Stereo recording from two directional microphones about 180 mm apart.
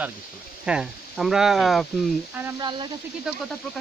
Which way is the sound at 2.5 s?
25° right (ahead or behind).